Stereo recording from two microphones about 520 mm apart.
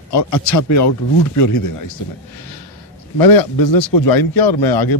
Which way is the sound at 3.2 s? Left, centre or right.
Left.